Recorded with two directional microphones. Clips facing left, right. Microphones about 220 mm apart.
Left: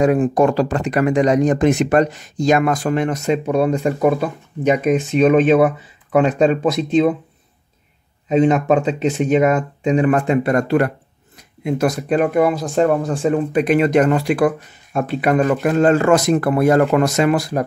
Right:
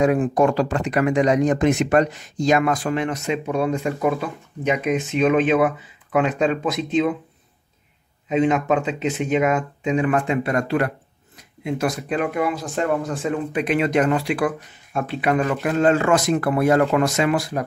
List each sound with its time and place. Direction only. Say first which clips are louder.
0.0 s speech: left 3 dB; 35° left (ahead or behind)
8.3 s speech: left 4 dB; 35° left (ahead or behind)